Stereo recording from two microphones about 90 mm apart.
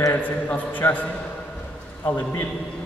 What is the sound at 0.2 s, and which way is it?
A man's voice, 20° left (ahead or behind).